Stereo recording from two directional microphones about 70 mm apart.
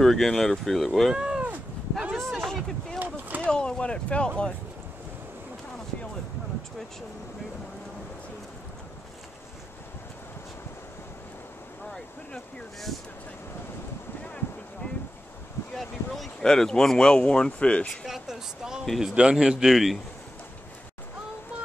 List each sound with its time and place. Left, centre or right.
0.0 s speech: centre
1.1 s a sound: centre
2.1 s boat: centre
3.0 s a sound: right
3.4 s speech: centre
14.2 s boat: centre
15.7 s speech: centre
18.0 s speech: centre